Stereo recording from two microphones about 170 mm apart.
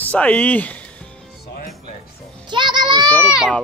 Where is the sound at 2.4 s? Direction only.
25° right (ahead or behind).